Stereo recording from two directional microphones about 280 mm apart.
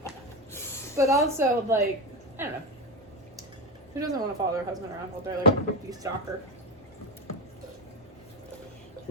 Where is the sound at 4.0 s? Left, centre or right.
Centre.